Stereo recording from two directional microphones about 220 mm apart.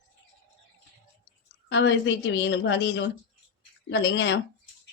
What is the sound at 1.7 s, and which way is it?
A woman's voice, 55° left (ahead or behind).